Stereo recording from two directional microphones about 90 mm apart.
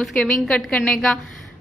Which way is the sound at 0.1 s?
10° left (ahead or behind).